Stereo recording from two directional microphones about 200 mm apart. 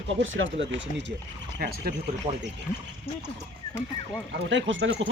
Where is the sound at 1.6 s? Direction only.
50° right (ahead or behind).